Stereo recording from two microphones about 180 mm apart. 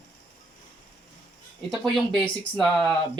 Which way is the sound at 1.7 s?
Centre (ahead or behind).